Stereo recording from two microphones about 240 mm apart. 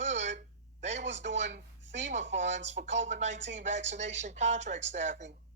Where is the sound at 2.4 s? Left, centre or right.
Right.